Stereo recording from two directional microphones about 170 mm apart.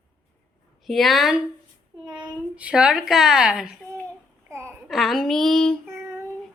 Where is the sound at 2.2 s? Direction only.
5° right (ahead or behind).